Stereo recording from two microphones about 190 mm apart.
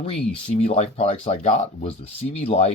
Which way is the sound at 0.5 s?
35° left (ahead or behind).